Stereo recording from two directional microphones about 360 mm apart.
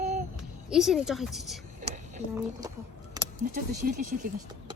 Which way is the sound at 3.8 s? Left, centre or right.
Right.